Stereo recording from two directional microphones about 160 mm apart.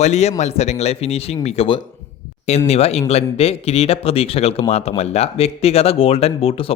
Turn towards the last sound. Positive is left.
turn(degrees=35)  # may be behind; listen again after turning